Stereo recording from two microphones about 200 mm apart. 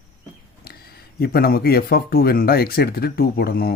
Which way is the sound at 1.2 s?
50° left (ahead or behind).